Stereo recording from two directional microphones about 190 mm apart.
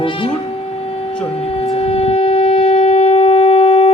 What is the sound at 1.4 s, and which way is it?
Shofar, 30° left (ahead or behind).